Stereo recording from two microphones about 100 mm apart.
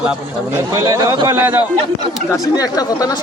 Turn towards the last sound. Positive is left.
turn(degrees=40)  # may be behind; listen again after turning